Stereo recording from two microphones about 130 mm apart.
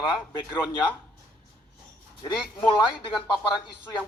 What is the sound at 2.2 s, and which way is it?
Speech, 35° left (ahead or behind).